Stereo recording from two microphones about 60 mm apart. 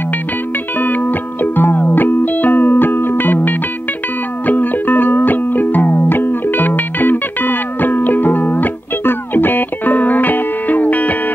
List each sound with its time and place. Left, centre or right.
0.7 s music: left